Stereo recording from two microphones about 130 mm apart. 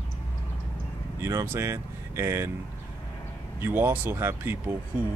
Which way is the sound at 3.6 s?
15° right (ahead or behind).